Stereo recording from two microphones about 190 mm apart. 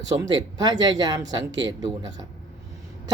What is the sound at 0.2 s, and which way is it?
Speech, 20° right (ahead or behind).